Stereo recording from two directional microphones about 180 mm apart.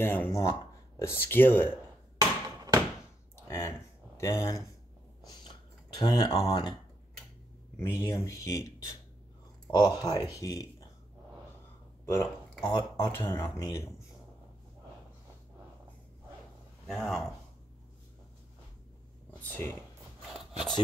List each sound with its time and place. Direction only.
0.0 s speech: 10° left (ahead or behind)
2.1 s hammer: 20° right (ahead or behind)
3.3 s a sound: 15° left (ahead or behind)
5.9 s speech: 25° left (ahead or behind)
7.8 s speech: 20° left (ahead or behind)
12.6 s speech: 20° left (ahead or behind)
16.8 s speech: centre (ahead or behind)
19.4 s speech: 15° left (ahead or behind)
20.3 s a sound: centre (ahead or behind)